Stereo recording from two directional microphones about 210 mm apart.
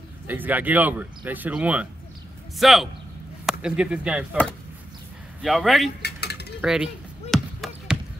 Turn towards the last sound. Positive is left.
turn(degrees=0)  # may be behind; listen again after turning